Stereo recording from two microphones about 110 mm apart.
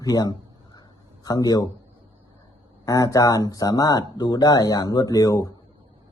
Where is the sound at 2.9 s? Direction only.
30° left (ahead or behind).